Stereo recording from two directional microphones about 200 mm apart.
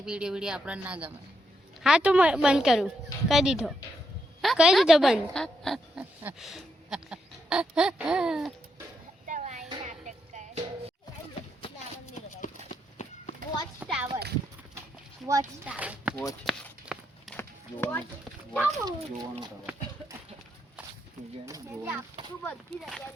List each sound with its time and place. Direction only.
0.0 s speech: 5° right (ahead or behind)
9.2 s a sound: 40° right (ahead or behind)
9.8 s music: 35° right (ahead or behind)
12.6 s horse: 40° left (ahead or behind)
13.7 s a sound: 5° right (ahead or behind)
15.3 s a child's voice: 15° right (ahead or behind)
16.5 s a sound: centre (ahead or behind)
17.7 s speech: 10° left (ahead or behind)
18.6 s speech: 15° right (ahead or behind)
21.4 s a child's voice: 15° right (ahead or behind)
22.4 s speech: 5° left (ahead or behind)